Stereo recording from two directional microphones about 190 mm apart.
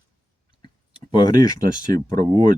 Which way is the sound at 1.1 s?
25° left (ahead or behind).